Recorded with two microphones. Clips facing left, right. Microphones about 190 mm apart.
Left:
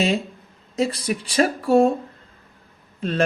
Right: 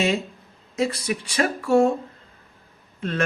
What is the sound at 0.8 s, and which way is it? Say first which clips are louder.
Speech: left 1 dB; 30° left (ahead or behind).